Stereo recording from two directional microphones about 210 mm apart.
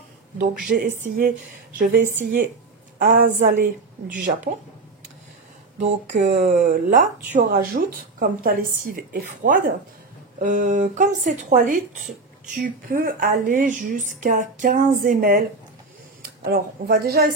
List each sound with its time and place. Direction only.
0.7 s a woman's voice: 45° right (ahead or behind)
5.8 s speech: 35° right (ahead or behind)